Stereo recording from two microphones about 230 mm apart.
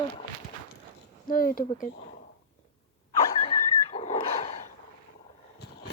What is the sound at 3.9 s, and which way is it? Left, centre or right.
Dog, left.